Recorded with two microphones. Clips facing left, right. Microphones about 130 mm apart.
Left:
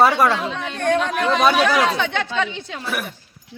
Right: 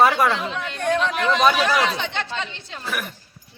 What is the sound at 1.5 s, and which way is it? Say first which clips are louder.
Speech: left 3 dB; 55° left (ahead or behind).